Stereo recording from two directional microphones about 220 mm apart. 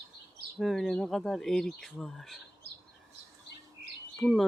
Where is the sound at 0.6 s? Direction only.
Centre (ahead or behind).